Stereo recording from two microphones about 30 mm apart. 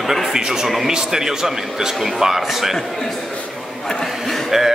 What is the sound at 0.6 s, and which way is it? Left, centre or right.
A man's voice, centre.